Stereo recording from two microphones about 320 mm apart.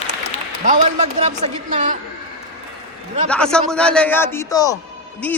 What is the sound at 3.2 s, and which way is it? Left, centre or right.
A man's voice, centre.